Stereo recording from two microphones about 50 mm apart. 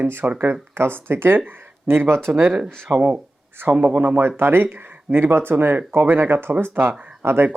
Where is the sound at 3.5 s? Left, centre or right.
Right.